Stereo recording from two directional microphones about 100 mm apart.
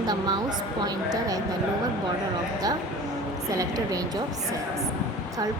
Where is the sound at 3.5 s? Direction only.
35° right (ahead or behind).